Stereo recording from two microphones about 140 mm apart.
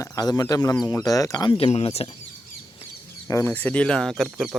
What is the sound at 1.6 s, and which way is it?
Speech, 45° left (ahead or behind).